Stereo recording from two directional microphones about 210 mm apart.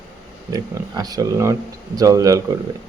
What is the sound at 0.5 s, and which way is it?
Speech, 15° right (ahead or behind).